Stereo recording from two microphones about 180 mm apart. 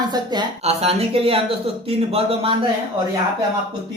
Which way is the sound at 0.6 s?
35° right (ahead or behind).